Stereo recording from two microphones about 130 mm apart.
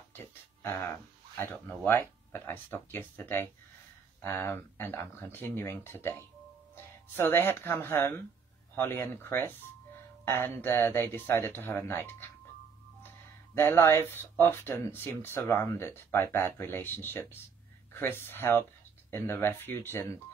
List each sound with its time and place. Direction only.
0.1 s speech: 20° left (ahead or behind)
13.6 s speech: 20° left (ahead or behind)